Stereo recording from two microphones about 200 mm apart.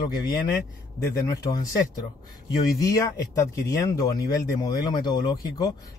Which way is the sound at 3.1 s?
15° left (ahead or behind).